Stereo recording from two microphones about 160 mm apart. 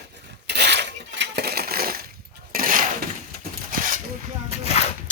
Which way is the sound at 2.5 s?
60° right (ahead or behind).